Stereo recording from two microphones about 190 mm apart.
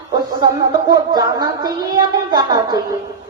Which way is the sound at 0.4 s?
20° right (ahead or behind).